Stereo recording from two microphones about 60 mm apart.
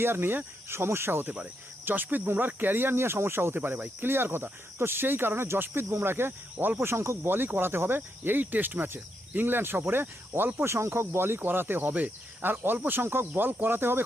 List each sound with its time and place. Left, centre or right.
0.0 s speech: right
1.8 s speech: right
7.2 s speech: right